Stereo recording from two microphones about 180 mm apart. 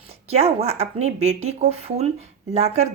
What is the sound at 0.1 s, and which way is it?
Speech, 35° right (ahead or behind).